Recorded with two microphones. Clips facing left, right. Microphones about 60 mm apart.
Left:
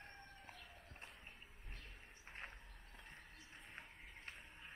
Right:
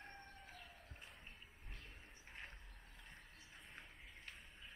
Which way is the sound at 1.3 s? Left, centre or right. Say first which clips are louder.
Even; centre.